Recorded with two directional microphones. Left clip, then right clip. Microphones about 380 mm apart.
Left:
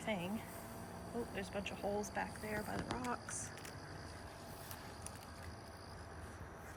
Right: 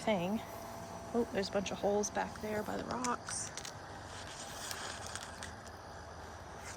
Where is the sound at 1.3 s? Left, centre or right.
Centre.